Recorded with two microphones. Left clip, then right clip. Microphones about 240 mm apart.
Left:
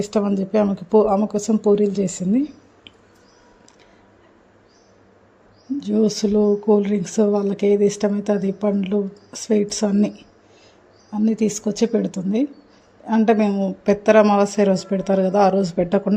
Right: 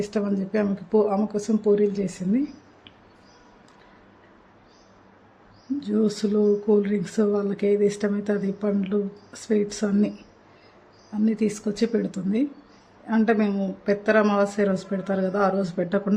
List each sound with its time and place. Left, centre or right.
0.0 s speech: left
5.8 s speech: centre
11.2 s speech: centre